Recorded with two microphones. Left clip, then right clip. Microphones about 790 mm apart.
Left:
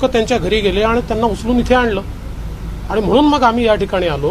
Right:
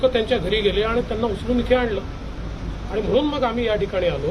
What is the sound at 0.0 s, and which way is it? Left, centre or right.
Speech, left.